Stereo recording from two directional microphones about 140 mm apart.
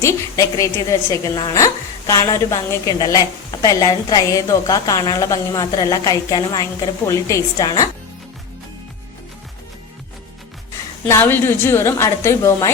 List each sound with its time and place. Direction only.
0.0 s a woman's voice: 20° left (ahead or behind)
11.0 s a woman's voice: 15° left (ahead or behind)